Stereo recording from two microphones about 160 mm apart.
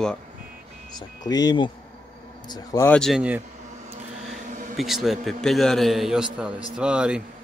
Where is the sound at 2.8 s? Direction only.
5° left (ahead or behind).